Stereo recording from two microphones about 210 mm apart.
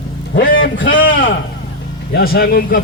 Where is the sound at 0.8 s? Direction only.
40° left (ahead or behind).